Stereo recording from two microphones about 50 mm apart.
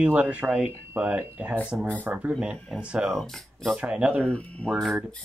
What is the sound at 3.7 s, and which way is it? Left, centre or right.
Speech, right.